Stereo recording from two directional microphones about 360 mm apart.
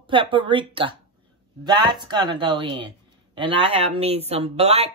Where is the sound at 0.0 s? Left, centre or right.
Centre.